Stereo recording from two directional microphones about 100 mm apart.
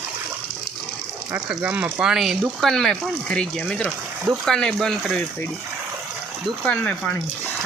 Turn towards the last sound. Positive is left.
turn(degrees=10)  # may be behind; listen again after turning